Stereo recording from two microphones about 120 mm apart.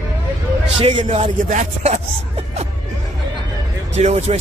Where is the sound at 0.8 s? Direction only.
55° right (ahead or behind).